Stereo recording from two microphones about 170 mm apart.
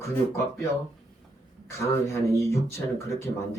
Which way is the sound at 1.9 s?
15° left (ahead or behind).